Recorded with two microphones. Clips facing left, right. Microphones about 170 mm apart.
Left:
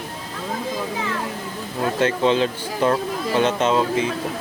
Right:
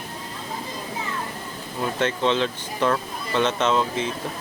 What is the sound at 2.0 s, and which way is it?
Speech, 10° left (ahead or behind).